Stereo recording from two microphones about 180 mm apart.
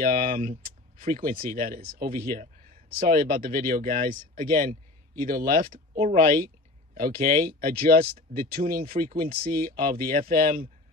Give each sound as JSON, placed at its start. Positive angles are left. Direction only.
{"t": 0.0, "sound": "speech", "side_deg": -50}